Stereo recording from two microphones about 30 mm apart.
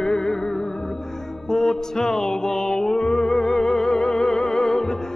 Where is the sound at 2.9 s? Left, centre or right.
Left.